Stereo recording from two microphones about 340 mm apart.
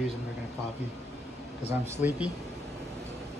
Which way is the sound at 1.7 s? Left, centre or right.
Centre.